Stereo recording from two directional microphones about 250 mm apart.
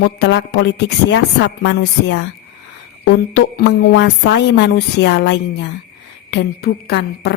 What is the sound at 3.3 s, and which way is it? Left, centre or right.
A woman's voice, left.